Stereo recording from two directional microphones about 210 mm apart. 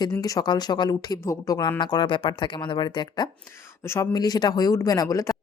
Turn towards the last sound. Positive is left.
turn(degrees=15)  # may be behind; listen again after turning